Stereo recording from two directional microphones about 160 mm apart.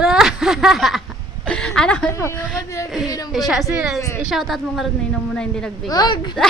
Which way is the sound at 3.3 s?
Centre (ahead or behind).